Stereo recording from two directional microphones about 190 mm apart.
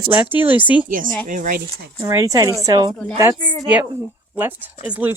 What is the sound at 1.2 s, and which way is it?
Speech, 45° right (ahead or behind).